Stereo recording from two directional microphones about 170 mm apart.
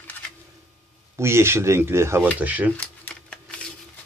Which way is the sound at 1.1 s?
15° right (ahead or behind).